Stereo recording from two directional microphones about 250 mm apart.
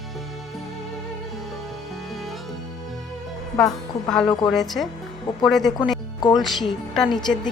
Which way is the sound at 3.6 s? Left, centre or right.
Centre.